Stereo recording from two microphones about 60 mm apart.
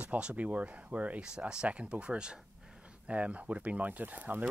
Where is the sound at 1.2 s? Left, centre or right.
Centre.